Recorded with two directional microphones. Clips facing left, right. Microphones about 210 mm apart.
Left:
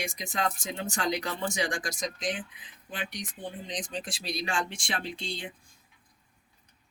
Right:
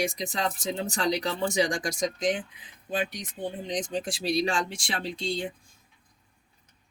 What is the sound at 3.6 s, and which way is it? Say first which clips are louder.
Speech: right 7 dB; 25° right (ahead or behind).